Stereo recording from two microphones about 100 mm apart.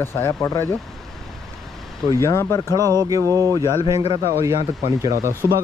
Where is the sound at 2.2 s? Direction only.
30° left (ahead or behind).